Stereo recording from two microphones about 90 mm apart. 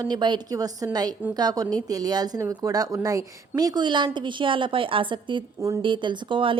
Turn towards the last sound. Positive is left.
turn(degrees=-70)  # may be behind; listen again after turning